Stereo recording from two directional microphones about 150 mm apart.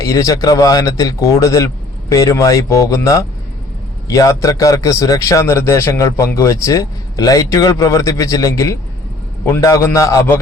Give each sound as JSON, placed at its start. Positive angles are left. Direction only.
{"t": 0.0, "sound": "a man's voice", "side_deg": 20}